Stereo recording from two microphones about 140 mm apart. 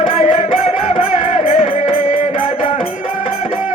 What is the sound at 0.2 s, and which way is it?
Music, 60° left (ahead or behind).